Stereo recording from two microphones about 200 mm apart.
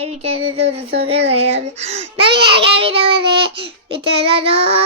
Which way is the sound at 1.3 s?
30° right (ahead or behind).